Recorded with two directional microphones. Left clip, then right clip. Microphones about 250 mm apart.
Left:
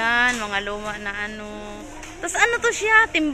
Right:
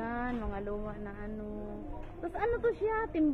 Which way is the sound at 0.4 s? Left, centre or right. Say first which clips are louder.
Left 13 dB; centre.